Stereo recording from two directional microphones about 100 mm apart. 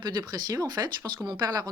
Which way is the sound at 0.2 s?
40° right (ahead or behind).